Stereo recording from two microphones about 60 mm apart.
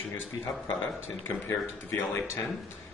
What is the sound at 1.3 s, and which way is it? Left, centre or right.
Speech, left.